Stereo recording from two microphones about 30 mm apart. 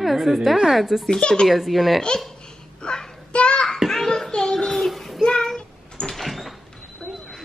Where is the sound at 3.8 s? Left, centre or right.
Centre.